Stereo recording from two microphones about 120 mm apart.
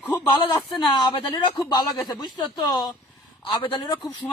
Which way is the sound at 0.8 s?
45° left (ahead or behind).